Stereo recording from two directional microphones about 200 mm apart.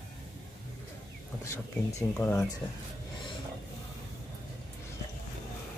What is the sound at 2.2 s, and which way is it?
Speech, 10° left (ahead or behind).